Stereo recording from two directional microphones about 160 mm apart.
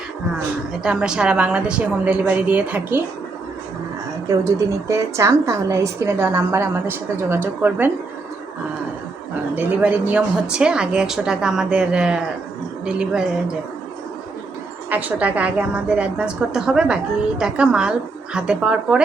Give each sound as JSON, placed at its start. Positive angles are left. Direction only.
{"t": 0.8, "sound": "a woman's voice", "side_deg": -5}
{"t": 4.3, "sound": "a woman's voice", "side_deg": -20}
{"t": 9.6, "sound": "speech", "side_deg": -10}
{"t": 14.8, "sound": "a woman's voice", "side_deg": -10}